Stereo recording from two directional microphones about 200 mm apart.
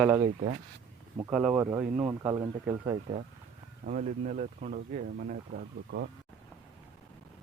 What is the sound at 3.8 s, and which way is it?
Speech, 40° right (ahead or behind).